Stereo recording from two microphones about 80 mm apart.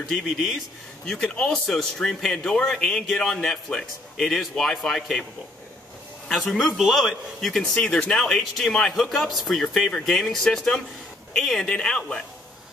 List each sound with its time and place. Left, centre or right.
0.1 s speech: centre
1.0 s speech: centre
6.2 s speech: centre